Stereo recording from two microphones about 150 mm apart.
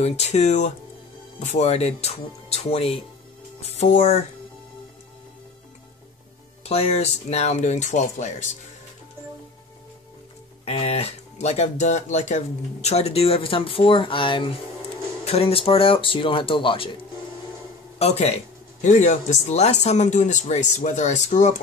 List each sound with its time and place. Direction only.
0.0 s speech: 45° left (ahead or behind)
6.6 s speech: 45° left (ahead or behind)
10.6 s speech: 45° left (ahead or behind)
17.9 s speech: 45° left (ahead or behind)
18.8 s speech: 55° left (ahead or behind)